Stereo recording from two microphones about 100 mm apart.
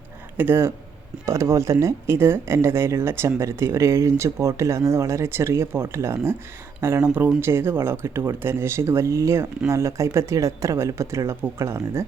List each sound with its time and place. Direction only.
0.3 s speech: 20° right (ahead or behind)